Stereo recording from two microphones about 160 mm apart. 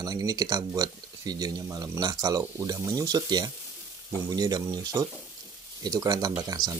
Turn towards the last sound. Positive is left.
turn(degrees=-25)  # may be behind; listen again after turning